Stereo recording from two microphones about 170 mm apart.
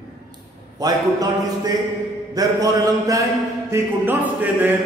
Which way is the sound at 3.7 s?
10° right (ahead or behind).